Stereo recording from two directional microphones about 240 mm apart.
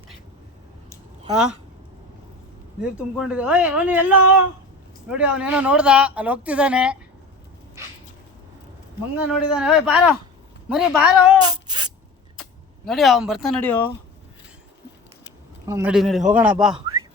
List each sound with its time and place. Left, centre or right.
2.8 s speech: centre
9.1 s speech: centre
11.4 s a sound: centre
12.4 s speech: centre
15.6 s speech: centre